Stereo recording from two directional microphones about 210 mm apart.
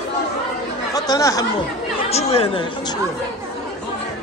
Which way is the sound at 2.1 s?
30° left (ahead or behind).